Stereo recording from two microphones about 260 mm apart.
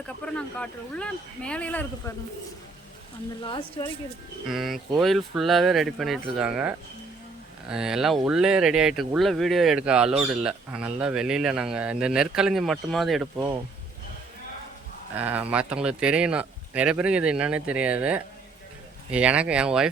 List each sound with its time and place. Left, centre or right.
0.3 s speech: centre
3.4 s speech: centre
4.4 s speech: centre
15.1 s speech: centre